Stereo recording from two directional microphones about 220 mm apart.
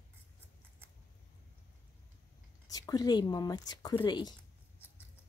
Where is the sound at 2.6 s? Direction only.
15° left (ahead or behind).